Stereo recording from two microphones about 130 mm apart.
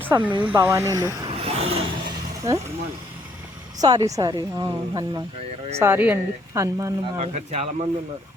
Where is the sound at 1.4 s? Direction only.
50° right (ahead or behind).